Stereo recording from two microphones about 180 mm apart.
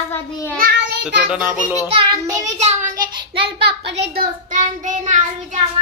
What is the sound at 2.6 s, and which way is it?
Speech, 40° right (ahead or behind).